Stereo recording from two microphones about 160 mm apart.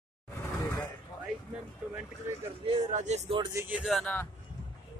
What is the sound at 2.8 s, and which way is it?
Speech, 50° right (ahead or behind).